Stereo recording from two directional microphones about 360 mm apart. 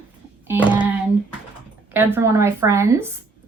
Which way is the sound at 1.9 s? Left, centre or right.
Centre.